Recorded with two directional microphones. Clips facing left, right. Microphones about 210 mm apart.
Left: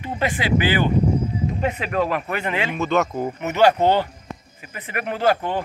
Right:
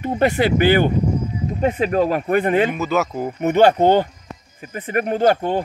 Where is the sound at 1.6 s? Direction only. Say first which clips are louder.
Right 7 dB; 45° right (ahead or behind).